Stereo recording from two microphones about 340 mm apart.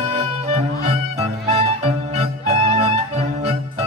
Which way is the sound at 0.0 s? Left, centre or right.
Centre.